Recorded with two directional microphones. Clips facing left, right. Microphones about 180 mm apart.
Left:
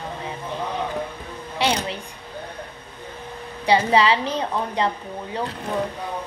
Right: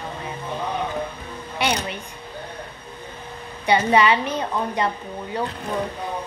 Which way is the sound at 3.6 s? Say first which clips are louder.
Even; 30° left (ahead or behind).